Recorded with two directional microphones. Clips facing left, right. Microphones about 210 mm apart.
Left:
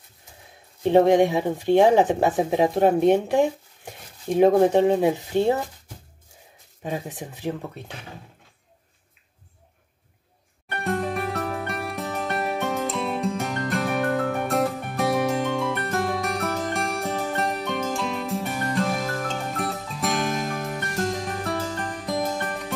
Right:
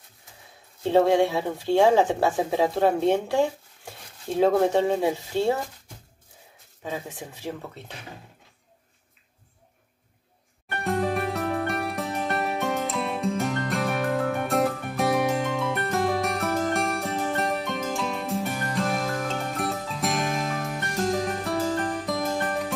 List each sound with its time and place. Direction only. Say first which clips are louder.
0.8 s speech: left 3 dB; 15° left (ahead or behind)
6.8 s speech: left 3 dB; 20° left (ahead or behind)
10.8 s music: right 1 dB; centre (ahead or behind)